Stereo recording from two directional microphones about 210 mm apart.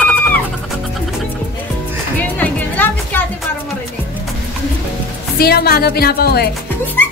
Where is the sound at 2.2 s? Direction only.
10° left (ahead or behind).